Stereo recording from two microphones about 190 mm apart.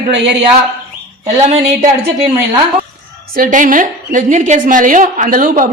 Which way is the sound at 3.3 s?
45° right (ahead or behind).